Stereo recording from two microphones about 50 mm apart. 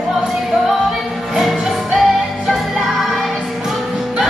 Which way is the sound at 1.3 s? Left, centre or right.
Centre.